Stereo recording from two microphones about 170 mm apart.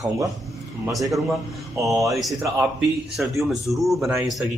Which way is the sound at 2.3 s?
15° right (ahead or behind).